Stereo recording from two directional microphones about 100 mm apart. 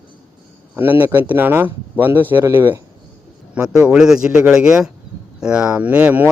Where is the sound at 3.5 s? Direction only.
10° right (ahead or behind).